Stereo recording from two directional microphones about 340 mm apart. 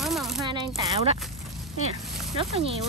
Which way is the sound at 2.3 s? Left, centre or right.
Centre.